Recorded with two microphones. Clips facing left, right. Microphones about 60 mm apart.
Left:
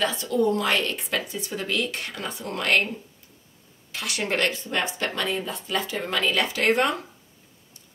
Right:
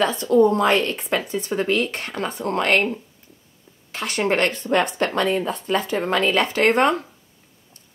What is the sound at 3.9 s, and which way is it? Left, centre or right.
A woman's voice, right.